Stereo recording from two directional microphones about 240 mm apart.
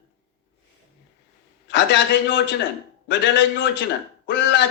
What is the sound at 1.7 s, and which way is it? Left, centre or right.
A man's voice, left.